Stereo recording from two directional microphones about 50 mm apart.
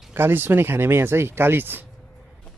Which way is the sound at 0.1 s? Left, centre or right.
Right.